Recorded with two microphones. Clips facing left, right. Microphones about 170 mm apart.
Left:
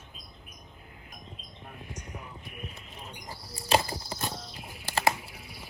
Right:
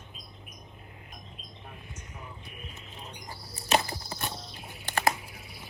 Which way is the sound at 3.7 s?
25° left (ahead or behind).